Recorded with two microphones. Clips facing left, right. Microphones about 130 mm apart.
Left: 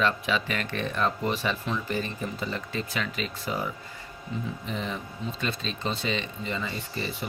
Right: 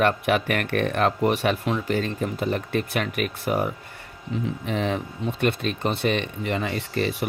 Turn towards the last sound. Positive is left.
turn(degrees=-75)  # may be behind; listen again after turning